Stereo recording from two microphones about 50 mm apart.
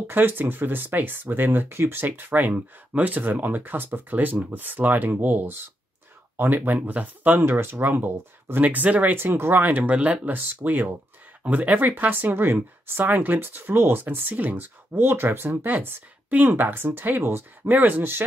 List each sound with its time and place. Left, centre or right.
0.0 s speech: right
2.2 s speech: right
9.1 s speech: right
9.7 s speech: right
10.5 s speech: right
11.4 s speech: right
15.0 s speech: right